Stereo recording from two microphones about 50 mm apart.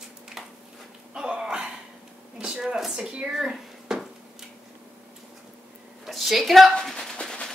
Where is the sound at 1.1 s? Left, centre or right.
Centre.